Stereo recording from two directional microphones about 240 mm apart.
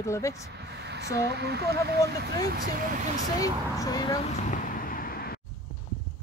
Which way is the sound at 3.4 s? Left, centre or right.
Centre.